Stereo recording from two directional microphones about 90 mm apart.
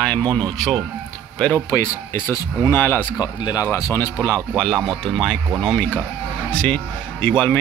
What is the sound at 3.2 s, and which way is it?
Speech, 50° left (ahead or behind).